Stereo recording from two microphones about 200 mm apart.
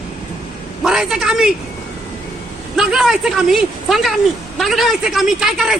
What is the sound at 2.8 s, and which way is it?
A woman's voice, centre (ahead or behind).